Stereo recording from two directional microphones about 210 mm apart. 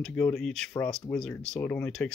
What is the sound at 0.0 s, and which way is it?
Speech, 5° left (ahead or behind).